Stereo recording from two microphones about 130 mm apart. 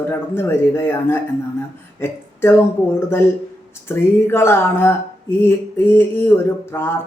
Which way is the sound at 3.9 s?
20° left (ahead or behind).